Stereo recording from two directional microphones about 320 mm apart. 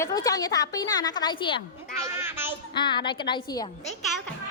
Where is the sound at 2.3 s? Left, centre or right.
Centre.